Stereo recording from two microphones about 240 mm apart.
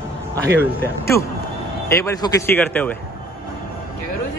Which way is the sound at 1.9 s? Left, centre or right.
Centre.